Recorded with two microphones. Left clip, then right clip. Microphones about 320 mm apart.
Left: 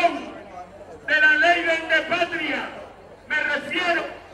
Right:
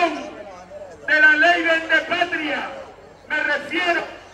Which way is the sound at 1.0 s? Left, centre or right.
Centre.